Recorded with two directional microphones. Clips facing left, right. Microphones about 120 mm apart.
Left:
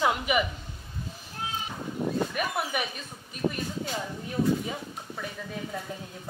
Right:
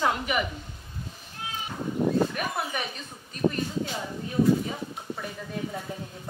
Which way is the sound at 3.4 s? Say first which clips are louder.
Right 3 dB; 60° right (ahead or behind).